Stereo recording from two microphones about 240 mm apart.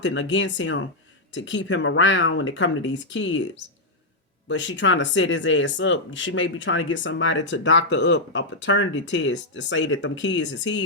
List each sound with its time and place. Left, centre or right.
0.0 s speech: left